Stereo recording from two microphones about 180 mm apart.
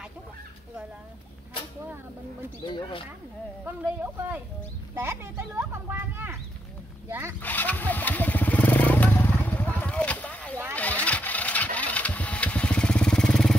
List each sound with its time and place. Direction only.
2.7 s speech: 30° left (ahead or behind)
3.6 s speech: 10° right (ahead or behind)
7.4 s motorcycle: 10° left (ahead or behind)
10.7 s vehicle: 10° left (ahead or behind)